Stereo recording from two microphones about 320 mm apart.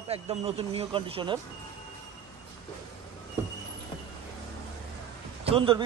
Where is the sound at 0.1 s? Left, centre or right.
Centre.